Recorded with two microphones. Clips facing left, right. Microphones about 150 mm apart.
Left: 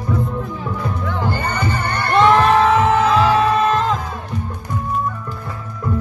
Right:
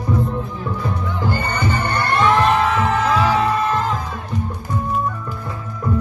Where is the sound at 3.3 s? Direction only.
90° left.